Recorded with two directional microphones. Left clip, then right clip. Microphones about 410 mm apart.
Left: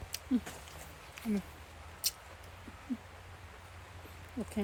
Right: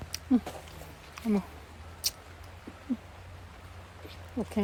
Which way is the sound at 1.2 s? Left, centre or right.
Centre.